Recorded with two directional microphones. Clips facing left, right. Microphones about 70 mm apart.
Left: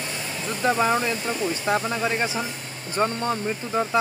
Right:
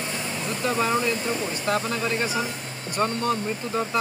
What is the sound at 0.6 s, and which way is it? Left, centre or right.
Speech, left.